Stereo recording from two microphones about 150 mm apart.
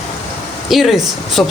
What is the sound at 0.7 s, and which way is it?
Speech, centre (ahead or behind).